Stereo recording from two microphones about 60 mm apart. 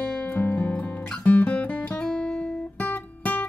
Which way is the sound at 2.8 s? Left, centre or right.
Left.